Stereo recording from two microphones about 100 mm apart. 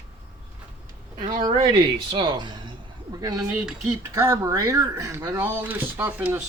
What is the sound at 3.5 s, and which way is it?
Speech, 10° right (ahead or behind).